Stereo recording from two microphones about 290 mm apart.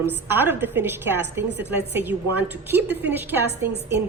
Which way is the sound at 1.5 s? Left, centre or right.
Right.